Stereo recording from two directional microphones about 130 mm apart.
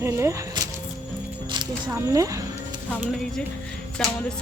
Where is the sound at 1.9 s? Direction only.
20° right (ahead or behind).